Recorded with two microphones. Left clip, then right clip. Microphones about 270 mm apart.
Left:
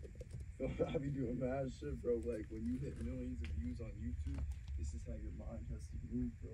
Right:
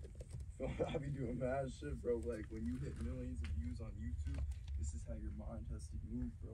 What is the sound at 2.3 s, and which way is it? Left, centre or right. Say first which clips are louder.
Speech: left 2 dB; centre.